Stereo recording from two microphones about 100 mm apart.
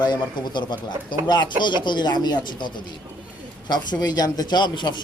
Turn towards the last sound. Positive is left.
turn(degrees=50)  # may be behind; listen again after turning